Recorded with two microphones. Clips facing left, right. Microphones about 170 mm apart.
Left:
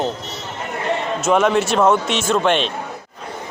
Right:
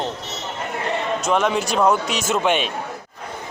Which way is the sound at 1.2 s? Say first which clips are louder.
Left 5 dB; 5° left (ahead or behind).